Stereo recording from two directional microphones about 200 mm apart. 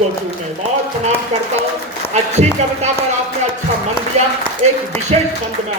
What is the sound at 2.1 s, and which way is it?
Speech, 35° right (ahead or behind).